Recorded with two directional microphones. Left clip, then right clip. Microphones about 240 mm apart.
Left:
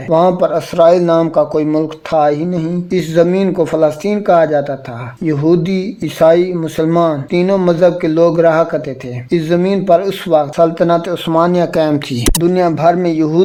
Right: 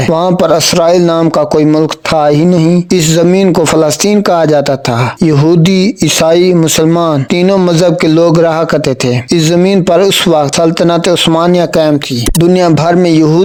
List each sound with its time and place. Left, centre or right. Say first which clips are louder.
0.1 s speech: right 1 dB; right
12.4 s speech: right 5 dB; right